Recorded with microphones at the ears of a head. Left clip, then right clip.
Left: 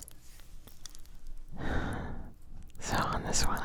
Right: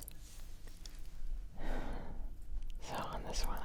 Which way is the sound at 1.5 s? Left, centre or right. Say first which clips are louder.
Left 9 dB; left.